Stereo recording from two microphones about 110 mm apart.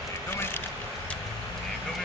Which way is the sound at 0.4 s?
20° left (ahead or behind).